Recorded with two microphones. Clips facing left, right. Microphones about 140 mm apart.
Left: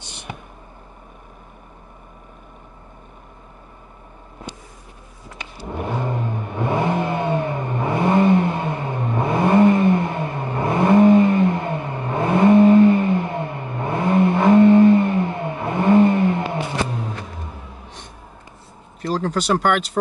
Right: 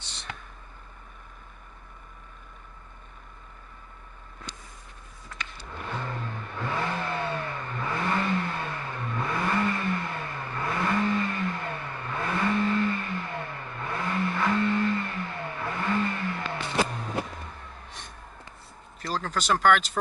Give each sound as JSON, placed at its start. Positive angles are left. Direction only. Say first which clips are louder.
{"t": 0.0, "sound": "a sound", "louder": "left 6 dB", "side_deg": 15}
{"t": 5.9, "sound": "vehicle", "louder": "left 9 dB", "side_deg": 25}
{"t": 18.9, "sound": "speech", "louder": "left 8 dB", "side_deg": 5}